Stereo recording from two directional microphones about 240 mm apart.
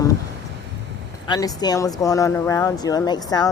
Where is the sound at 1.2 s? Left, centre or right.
Centre.